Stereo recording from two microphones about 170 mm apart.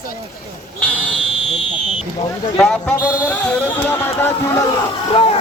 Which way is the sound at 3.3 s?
10° left (ahead or behind).